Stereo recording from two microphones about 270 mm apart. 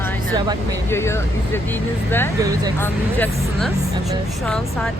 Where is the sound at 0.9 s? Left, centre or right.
Centre.